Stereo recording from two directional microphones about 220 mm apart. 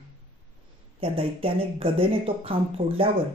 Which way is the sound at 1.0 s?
25° right (ahead or behind).